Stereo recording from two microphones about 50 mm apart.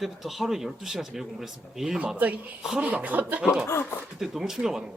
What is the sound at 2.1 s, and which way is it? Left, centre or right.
Speech, right.